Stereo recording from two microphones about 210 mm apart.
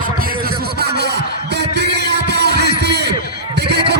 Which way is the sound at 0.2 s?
45° right (ahead or behind).